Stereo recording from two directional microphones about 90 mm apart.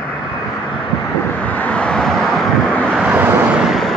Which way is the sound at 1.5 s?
15° left (ahead or behind).